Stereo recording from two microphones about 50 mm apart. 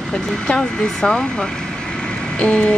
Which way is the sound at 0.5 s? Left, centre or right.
Centre.